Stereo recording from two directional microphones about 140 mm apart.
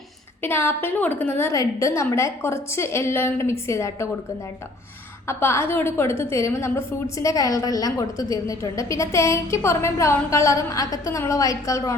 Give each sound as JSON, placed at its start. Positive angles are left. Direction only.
{"t": 0.4, "sound": "a woman's voice", "side_deg": 15}
{"t": 5.2, "sound": "a woman's voice", "side_deg": 20}